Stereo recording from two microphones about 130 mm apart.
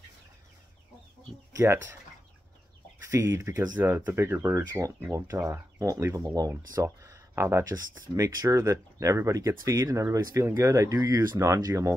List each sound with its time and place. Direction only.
1.6 s speech: 20° right (ahead or behind)
3.0 s speech: 20° right (ahead or behind)